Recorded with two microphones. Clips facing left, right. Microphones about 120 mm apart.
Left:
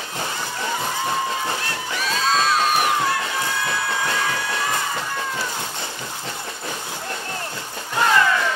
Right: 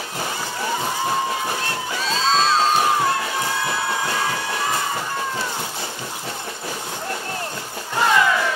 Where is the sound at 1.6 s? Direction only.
25° right (ahead or behind).